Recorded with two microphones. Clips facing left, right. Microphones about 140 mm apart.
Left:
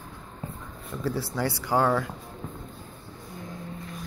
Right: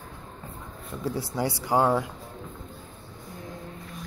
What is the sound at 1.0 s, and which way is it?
Speech, 20° right (ahead or behind).